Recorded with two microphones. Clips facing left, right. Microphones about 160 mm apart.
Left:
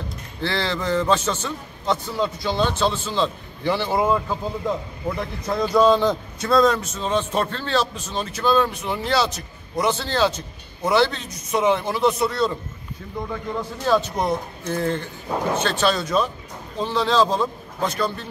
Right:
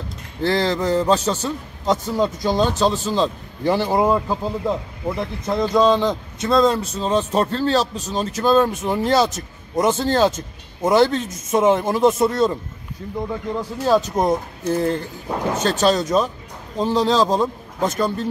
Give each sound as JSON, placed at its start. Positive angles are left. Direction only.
{"t": 0.4, "sound": "a man's voice", "side_deg": -40}
{"t": 5.5, "sound": "a man's voice", "side_deg": -20}
{"t": 13.6, "sound": "a man's voice", "side_deg": -35}